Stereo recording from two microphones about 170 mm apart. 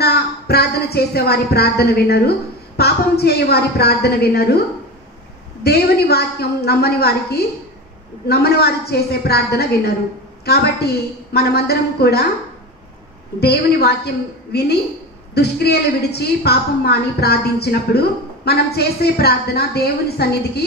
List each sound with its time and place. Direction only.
0.0 s a woman's voice: 70° left (ahead or behind)
13.4 s a woman's voice: 75° left (ahead or behind)